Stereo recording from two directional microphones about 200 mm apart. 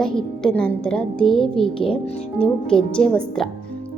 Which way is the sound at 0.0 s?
5° left (ahead or behind).